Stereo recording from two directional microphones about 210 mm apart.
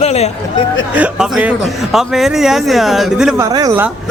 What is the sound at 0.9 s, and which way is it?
Speech, 5° right (ahead or behind).